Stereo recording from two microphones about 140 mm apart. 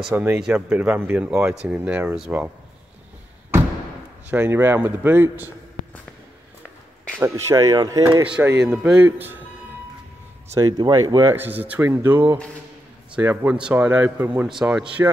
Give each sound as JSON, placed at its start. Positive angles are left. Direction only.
{"t": 0.1, "sound": "speech", "side_deg": -5}
{"t": 4.3, "sound": "speech", "side_deg": -15}
{"t": 7.2, "sound": "speech", "side_deg": -20}
{"t": 8.3, "sound": "speech", "side_deg": -10}
{"t": 10.8, "sound": "speech", "side_deg": -25}
{"t": 11.3, "sound": "speech", "side_deg": -10}
{"t": 14.5, "sound": "speech", "side_deg": -5}